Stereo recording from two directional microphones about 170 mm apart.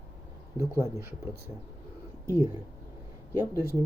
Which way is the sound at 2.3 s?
15° right (ahead or behind).